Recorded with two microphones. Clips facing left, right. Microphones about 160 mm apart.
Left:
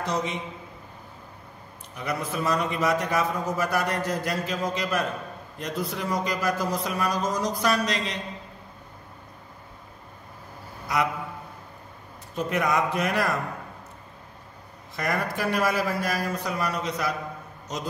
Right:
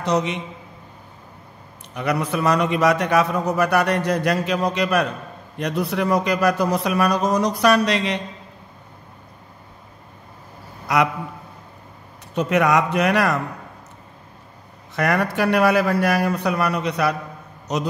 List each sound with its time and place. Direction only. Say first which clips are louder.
0.0 s a man's voice: right 7 dB; 70° right (ahead or behind)
2.0 s a man's voice: right 7 dB; 70° right (ahead or behind)
10.9 s a man's voice: right 7 dB; 70° right (ahead or behind)
12.4 s a man's voice: right 7 dB; 75° right (ahead or behind)
15.0 s a man's voice: right 7 dB; 70° right (ahead or behind)